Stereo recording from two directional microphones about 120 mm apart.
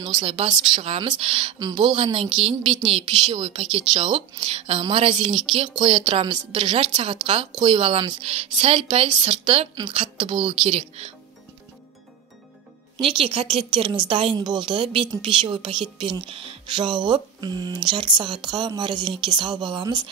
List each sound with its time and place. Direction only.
0.0 s a woman's voice: 45° right (ahead or behind)
12.9 s a woman's voice: 50° right (ahead or behind)